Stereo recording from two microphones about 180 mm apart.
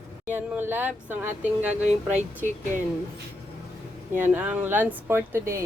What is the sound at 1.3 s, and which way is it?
Speech, 40° right (ahead or behind).